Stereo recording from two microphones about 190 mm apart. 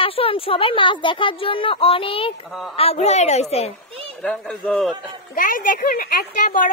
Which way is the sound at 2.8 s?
35° left (ahead or behind).